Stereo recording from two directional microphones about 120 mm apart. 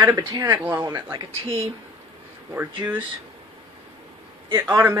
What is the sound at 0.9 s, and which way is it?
Speech, 45° right (ahead or behind).